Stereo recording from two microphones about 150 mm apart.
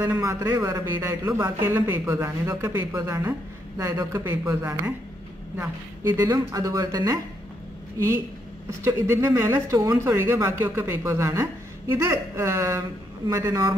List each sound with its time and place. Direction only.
0.0 s a man's voice: 20° right (ahead or behind)
8.6 s a man's voice: 20° right (ahead or behind)